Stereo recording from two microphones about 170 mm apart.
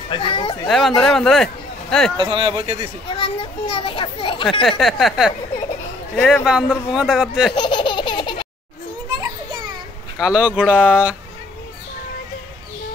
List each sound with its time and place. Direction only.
0.1 s speech: 30° left (ahead or behind)
0.7 s a man's voice: centre (ahead or behind)
2.1 s speech: 30° right (ahead or behind)
3.2 s a child's voice: 30° left (ahead or behind)
4.6 s speech: centre (ahead or behind)
7.5 s laughter: 25° left (ahead or behind)
10.2 s speech: 5° right (ahead or behind)